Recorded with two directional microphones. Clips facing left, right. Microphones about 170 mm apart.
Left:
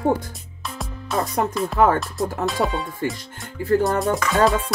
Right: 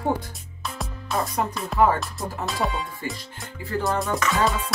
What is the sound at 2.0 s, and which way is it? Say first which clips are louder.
Speech: left 7 dB; centre (ahead or behind).